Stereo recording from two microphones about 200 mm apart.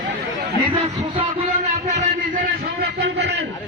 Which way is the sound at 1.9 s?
40° right (ahead or behind).